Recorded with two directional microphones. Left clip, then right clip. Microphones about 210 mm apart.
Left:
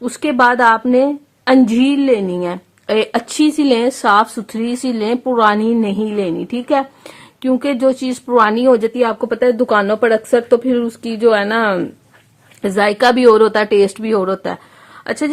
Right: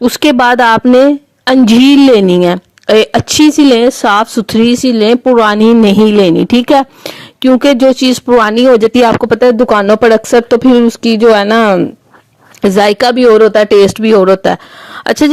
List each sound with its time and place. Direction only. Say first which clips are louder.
0.0 s a woman's voice: right 5 dB; 40° right (ahead or behind)
8.9 s a woman's voice: right 8 dB; 45° right (ahead or behind)
13.1 s speech: right 2 dB; 20° right (ahead or behind)
13.7 s a woman's voice: right 7 dB; 30° right (ahead or behind)